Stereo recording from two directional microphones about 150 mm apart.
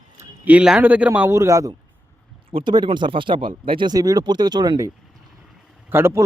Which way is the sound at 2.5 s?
35° right (ahead or behind).